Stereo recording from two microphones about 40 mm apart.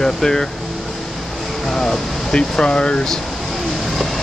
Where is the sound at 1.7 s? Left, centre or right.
Centre.